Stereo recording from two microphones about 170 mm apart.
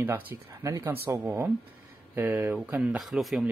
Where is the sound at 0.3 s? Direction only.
15° right (ahead or behind); by 3.4 s centre (ahead or behind).